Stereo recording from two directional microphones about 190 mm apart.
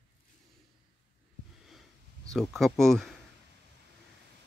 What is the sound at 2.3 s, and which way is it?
Speech, centre (ahead or behind).